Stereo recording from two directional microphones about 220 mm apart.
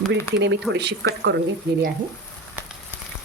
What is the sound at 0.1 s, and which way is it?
Speech, 50° right (ahead or behind).